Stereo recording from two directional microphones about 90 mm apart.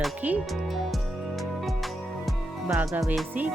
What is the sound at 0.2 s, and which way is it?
Speech, 15° right (ahead or behind).